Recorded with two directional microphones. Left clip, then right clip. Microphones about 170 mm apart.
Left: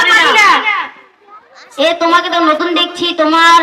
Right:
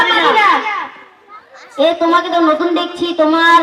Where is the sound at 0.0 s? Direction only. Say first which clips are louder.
Left 3 dB; 25° left (ahead or behind).